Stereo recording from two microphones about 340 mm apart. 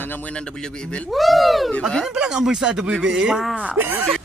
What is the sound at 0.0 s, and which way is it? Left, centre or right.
Speech, centre.